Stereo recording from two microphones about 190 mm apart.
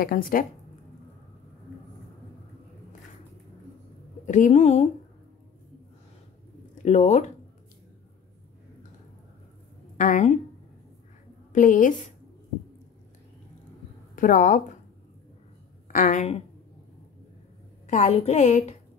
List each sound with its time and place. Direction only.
0.0 s speech: 50° left (ahead or behind)
4.3 s a woman's voice: 40° left (ahead or behind)
6.8 s a woman's voice: 35° left (ahead or behind)
9.9 s a woman's voice: 40° left (ahead or behind)
11.5 s speech: 45° left (ahead or behind)
14.1 s speech: 45° left (ahead or behind)
15.9 s a woman's voice: 40° left (ahead or behind)
17.8 s a woman's voice: 40° left (ahead or behind)